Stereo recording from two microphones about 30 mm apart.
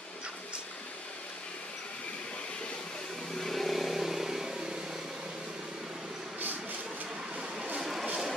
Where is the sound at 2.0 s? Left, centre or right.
Left.